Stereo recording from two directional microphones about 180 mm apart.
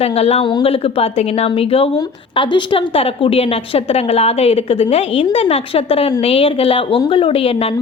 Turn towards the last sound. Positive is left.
turn(degrees=30)  # may be behind; listen again after turning